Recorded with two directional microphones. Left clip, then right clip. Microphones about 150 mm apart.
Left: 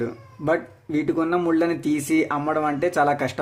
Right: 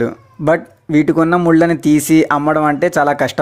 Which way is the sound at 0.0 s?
50° right (ahead or behind).